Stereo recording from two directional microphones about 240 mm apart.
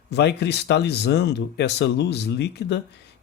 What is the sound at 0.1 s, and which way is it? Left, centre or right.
Speech, left.